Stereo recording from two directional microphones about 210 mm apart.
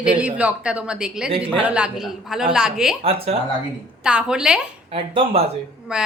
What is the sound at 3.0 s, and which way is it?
Speech, 30° right (ahead or behind).